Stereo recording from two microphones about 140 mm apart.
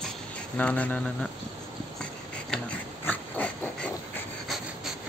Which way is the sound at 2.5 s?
10° left (ahead or behind).